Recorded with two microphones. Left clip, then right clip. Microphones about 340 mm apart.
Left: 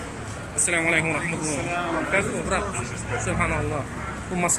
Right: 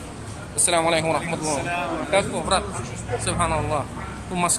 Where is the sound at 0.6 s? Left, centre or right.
Centre.